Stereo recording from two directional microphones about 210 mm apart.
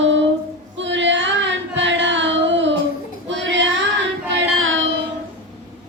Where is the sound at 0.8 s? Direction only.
60° right (ahead or behind).